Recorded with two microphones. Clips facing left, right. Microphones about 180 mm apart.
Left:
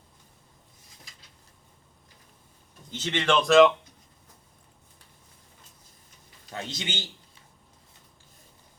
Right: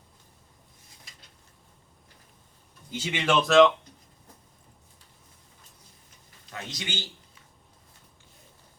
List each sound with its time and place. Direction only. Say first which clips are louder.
2.9 s speech: left 1 dB; 10° right (ahead or behind)
6.5 s a man's voice: left 3 dB; 25° left (ahead or behind)